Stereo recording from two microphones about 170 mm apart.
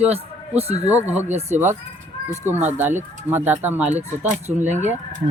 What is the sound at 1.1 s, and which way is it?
Speech, 10° right (ahead or behind).